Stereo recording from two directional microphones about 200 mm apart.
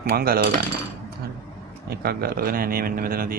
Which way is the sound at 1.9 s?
50° right (ahead or behind).